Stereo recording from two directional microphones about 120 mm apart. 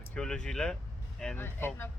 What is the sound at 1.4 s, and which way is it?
Speech, 20° left (ahead or behind).